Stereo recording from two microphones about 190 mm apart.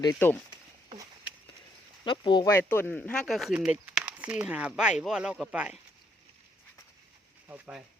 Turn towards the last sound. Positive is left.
turn(degrees=-5)  # may be behind; listen again after turning